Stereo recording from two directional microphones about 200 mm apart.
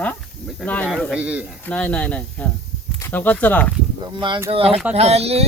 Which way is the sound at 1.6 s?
5° left (ahead or behind).